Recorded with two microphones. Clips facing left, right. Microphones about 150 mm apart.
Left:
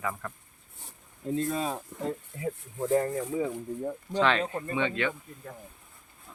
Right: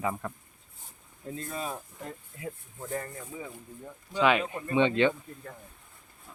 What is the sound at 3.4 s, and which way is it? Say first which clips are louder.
Speech: left 11 dB; 35° left (ahead or behind).